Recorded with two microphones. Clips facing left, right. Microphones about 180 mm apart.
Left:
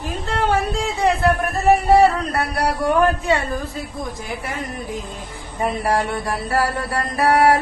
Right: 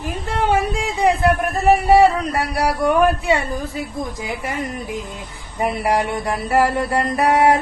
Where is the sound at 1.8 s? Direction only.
10° right (ahead or behind).